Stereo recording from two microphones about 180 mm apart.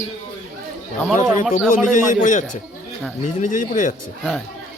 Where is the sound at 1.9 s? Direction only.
45° left (ahead or behind).